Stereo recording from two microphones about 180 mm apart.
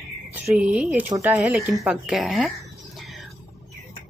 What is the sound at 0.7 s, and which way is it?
Speech, 5° right (ahead or behind).